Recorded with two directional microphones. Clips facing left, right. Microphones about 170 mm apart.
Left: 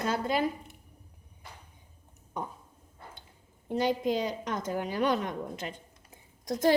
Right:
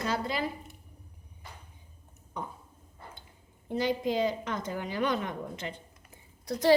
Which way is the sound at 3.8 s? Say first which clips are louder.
Even; 50° left (ahead or behind).